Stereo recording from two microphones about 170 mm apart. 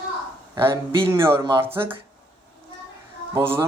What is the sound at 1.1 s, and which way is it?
Speech, 15° right (ahead or behind).